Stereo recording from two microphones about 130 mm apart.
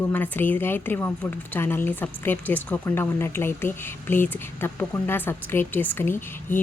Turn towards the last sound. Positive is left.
turn(degrees=15)  # may be behind; listen again after turning